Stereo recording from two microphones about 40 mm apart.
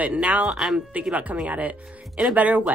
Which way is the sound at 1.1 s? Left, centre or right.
Right.